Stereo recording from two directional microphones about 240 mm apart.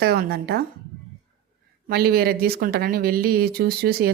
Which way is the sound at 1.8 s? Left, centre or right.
Right.